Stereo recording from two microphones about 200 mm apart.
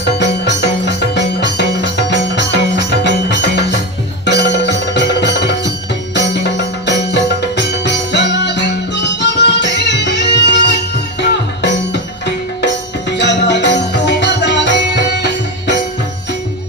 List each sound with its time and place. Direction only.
0.0 s music: 60° left (ahead or behind)